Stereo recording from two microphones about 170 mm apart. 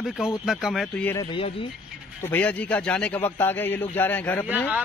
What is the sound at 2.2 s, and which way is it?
A man's voice, 10° left (ahead or behind).